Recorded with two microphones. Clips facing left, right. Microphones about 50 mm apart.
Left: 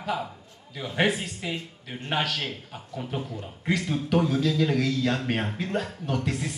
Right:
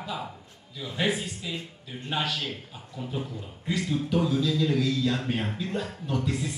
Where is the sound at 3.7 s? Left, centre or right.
Left.